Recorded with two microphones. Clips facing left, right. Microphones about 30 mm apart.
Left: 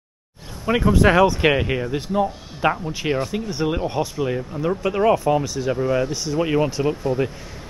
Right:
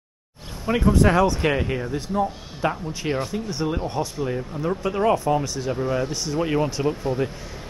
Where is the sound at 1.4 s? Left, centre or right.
Left.